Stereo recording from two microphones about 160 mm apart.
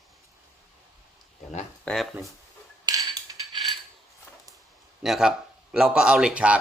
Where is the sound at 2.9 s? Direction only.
25° right (ahead or behind).